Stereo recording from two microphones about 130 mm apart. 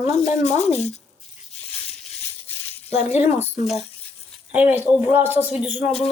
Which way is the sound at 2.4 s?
50° left (ahead or behind).